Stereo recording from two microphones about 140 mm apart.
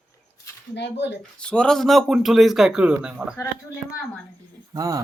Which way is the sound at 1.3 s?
5° left (ahead or behind).